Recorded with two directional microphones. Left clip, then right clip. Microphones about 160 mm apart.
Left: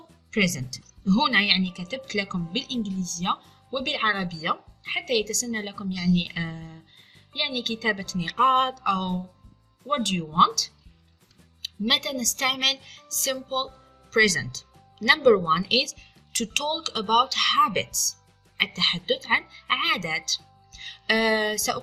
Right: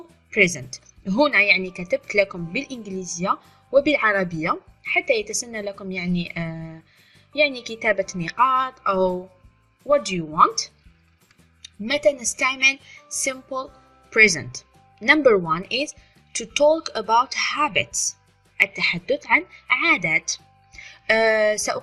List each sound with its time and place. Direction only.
0.3 s speech: 40° right (ahead or behind)
2.6 s speech: 15° right (ahead or behind)
3.2 s speech: 35° right (ahead or behind)
7.8 s speech: 40° right (ahead or behind)
13.0 s music: 10° right (ahead or behind)
13.2 s a woman's voice: 30° right (ahead or behind)